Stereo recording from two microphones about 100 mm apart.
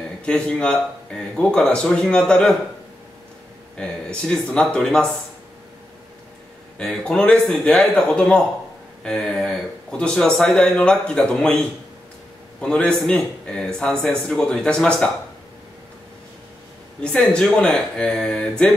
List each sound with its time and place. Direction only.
0.2 s speech: 10° left (ahead or behind)
3.7 s speech: 10° left (ahead or behind)
6.8 s speech: 5° left (ahead or behind)
17.0 s speech: 10° left (ahead or behind)